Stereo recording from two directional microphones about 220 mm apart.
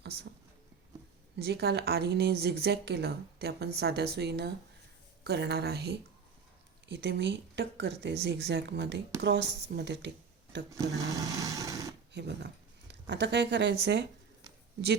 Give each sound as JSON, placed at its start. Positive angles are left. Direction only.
{"t": 1.4, "sound": "a woman's voice", "side_deg": -45}
{"t": 10.7, "sound": "speech", "side_deg": -15}
{"t": 12.1, "sound": "a woman's voice", "side_deg": -50}